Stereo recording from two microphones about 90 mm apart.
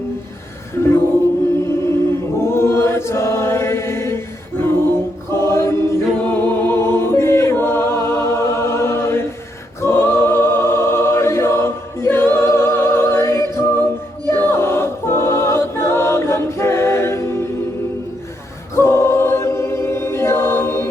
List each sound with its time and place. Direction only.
1.6 s chant: 30° left (ahead or behind)
5.3 s choir: 30° left (ahead or behind)
6.2 s music: 20° left (ahead or behind)
14.3 s choir: 25° left (ahead or behind)
18.7 s choir: 30° left (ahead or behind)